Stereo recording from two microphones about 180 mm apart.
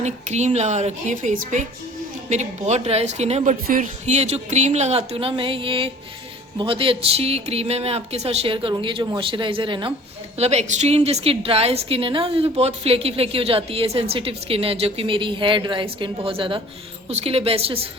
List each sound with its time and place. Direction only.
0.0 s a woman's voice: 40° right (ahead or behind)